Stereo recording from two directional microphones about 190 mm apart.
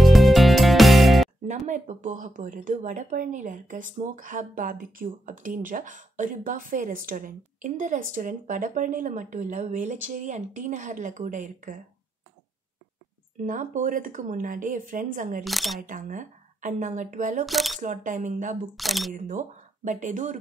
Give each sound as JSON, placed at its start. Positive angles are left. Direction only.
{"t": 0.0, "sound": "music", "side_deg": 0}
{"t": 1.7, "sound": "speech", "side_deg": -40}
{"t": 13.5, "sound": "speech", "side_deg": -45}
{"t": 15.4, "sound": "speech", "side_deg": 0}
{"t": 15.8, "sound": "speech", "side_deg": -45}
{"t": 17.5, "sound": "speech", "side_deg": 0}
{"t": 17.7, "sound": "speech", "side_deg": -45}
{"t": 18.8, "sound": "speech", "side_deg": 0}
{"t": 19.1, "sound": "speech", "side_deg": -40}